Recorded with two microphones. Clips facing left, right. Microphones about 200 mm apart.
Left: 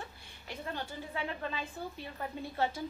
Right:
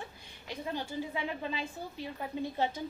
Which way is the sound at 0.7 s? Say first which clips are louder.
Right 5 dB; 15° right (ahead or behind).